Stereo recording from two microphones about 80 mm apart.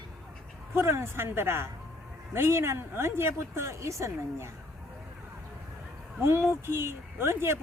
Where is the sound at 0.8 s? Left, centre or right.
Right.